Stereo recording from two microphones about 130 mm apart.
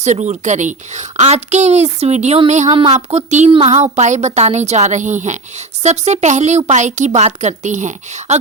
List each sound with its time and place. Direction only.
0.0 s a woman's voice: 65° right (ahead or behind)